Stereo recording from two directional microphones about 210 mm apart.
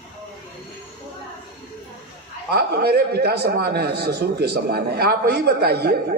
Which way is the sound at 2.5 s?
50° right (ahead or behind).